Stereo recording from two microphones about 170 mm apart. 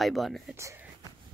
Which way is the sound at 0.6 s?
15° right (ahead or behind).